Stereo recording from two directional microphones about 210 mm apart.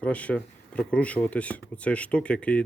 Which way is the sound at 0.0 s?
5° left (ahead or behind).